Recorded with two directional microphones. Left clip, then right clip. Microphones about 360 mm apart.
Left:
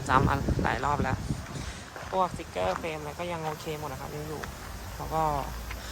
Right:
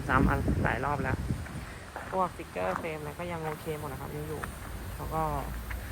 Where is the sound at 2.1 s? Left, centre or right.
Centre.